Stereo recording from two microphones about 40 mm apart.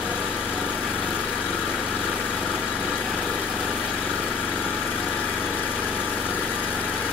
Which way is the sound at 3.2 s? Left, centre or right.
Left.